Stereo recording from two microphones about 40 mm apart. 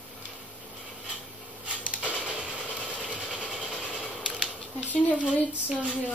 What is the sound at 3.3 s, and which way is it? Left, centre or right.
Vehicle, right.